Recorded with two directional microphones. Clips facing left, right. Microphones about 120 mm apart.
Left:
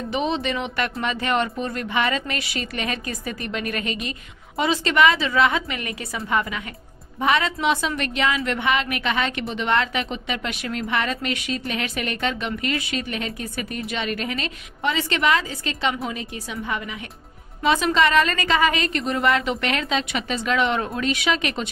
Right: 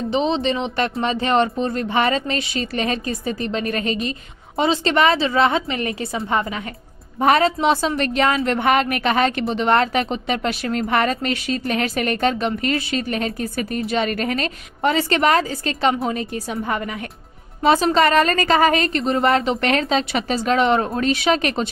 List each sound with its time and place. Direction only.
0.1 s a woman's voice: 25° right (ahead or behind)